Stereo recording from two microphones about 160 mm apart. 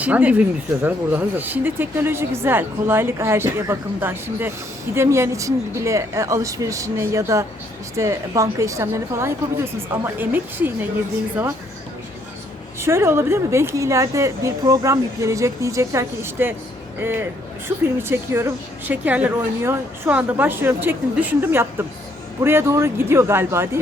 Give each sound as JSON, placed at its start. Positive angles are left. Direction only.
{"t": 0.0, "sound": "a woman's voice", "side_deg": -10}
{"t": 12.8, "sound": "a woman's voice", "side_deg": -15}